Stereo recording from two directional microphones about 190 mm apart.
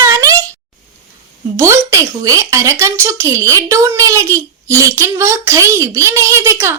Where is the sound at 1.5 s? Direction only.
15° right (ahead or behind).